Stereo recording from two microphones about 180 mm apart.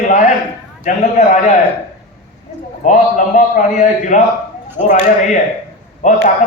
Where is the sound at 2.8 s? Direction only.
45° left (ahead or behind).